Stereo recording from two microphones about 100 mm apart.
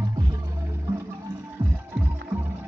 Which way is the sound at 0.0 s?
35° right (ahead or behind).